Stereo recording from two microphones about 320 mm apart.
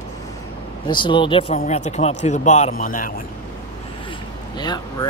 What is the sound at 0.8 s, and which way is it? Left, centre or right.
Speech, centre.